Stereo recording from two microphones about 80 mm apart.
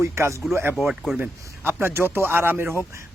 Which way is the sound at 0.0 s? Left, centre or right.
Right.